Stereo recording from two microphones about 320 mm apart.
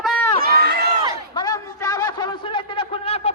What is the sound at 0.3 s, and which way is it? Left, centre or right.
Run, right.